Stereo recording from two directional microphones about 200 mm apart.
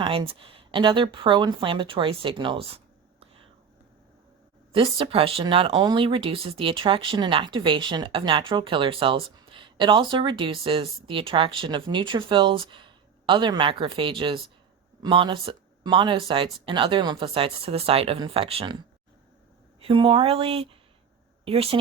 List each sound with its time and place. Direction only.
0.0 s speech: 25° right (ahead or behind)
4.7 s speech: 25° right (ahead or behind)
19.8 s speech: 25° right (ahead or behind)